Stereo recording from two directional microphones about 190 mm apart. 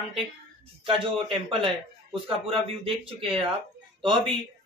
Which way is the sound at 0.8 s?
30° right (ahead or behind).